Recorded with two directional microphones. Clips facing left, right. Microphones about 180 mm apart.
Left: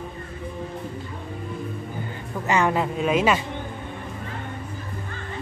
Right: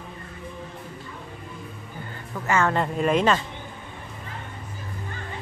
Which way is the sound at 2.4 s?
15° left (ahead or behind).